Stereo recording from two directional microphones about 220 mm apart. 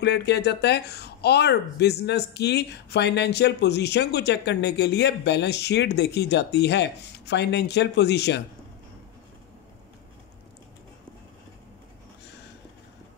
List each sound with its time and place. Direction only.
0.0 s speech: 50° left (ahead or behind)